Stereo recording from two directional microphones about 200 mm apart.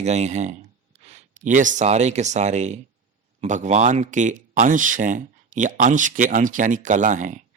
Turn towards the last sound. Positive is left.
turn(degrees=-40)  # may be behind; listen again after turning